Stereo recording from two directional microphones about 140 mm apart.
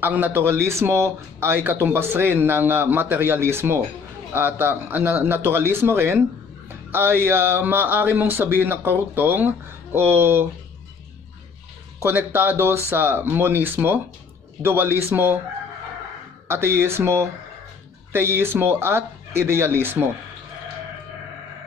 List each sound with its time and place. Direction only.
0.0 s speech: 15° right (ahead or behind)
12.0 s speech: 20° right (ahead or behind)
16.4 s speech: 15° right (ahead or behind)